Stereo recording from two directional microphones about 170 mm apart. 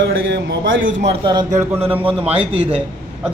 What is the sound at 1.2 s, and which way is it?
Speech, 25° right (ahead or behind).